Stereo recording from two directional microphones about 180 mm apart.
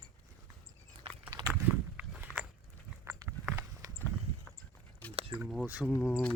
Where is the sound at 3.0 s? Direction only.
15° right (ahead or behind).